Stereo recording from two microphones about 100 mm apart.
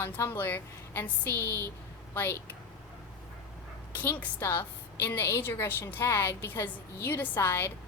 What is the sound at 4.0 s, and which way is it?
A woman's voice, 20° left (ahead or behind).